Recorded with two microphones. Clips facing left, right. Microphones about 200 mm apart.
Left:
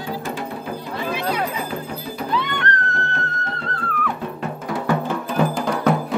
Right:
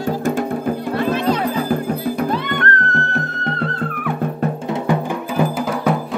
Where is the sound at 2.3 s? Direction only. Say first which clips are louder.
Right 3 dB; 50° right (ahead or behind).